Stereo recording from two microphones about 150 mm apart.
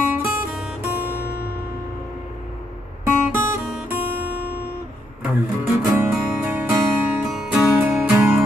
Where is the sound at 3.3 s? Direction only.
15° right (ahead or behind).